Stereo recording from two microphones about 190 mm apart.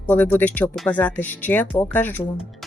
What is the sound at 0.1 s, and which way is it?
Speech, 10° left (ahead or behind).